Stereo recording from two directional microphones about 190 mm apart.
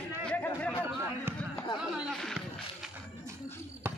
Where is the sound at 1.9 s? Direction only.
Centre (ahead or behind).